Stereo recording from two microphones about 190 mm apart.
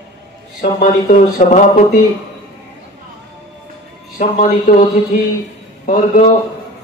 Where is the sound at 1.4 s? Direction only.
40° left (ahead or behind).